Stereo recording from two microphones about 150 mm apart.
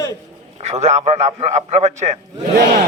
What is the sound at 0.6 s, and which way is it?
A man's voice, 50° right (ahead or behind).